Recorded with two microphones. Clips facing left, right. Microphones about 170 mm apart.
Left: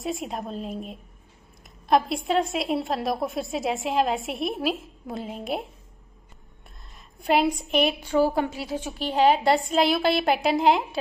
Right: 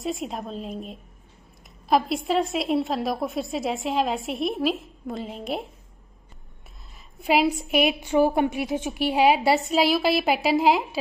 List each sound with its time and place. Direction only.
0.0 s a woman's voice: centre (ahead or behind)
7.2 s a woman's voice: 5° right (ahead or behind)
8.1 s a woman's voice: 20° right (ahead or behind); by 11.0 s centre (ahead or behind)